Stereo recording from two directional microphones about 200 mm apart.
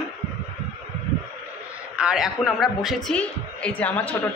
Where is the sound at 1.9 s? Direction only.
5° right (ahead or behind).